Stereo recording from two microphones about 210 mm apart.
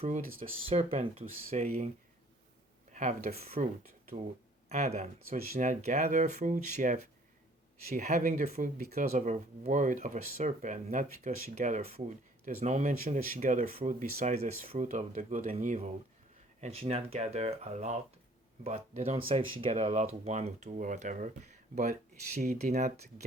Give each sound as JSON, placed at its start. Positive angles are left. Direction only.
{"t": 0.0, "sound": "speech", "side_deg": -30}
{"t": 2.9, "sound": "speech", "side_deg": -35}
{"t": 4.7, "sound": "speech", "side_deg": -30}
{"t": 22.4, "sound": "speech", "side_deg": -35}